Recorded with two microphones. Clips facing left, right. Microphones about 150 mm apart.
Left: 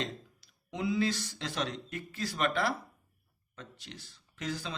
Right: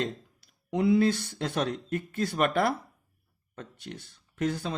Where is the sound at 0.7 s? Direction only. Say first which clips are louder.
Right 8 dB; 55° right (ahead or behind).